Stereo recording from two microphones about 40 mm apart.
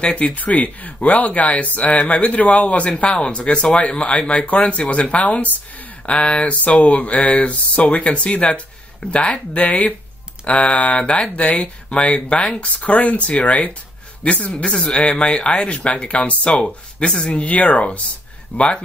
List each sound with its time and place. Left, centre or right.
0.0 s speech: left
3.1 s speech: left
17.1 s speech: centre
17.4 s speech: left
18.6 s speech: left